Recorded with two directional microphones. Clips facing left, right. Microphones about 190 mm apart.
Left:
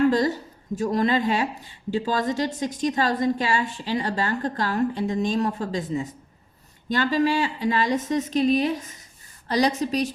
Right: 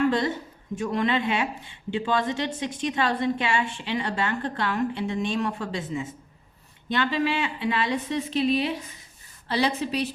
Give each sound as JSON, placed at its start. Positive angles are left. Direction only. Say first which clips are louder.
{"t": 0.1, "sound": "a woman's voice", "louder": "left 3 dB", "side_deg": 40}